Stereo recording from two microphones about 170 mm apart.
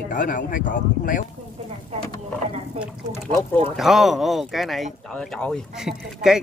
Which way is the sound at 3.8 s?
Centre (ahead or behind).